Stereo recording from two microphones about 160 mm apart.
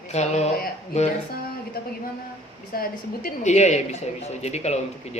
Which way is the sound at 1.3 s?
70° left (ahead or behind).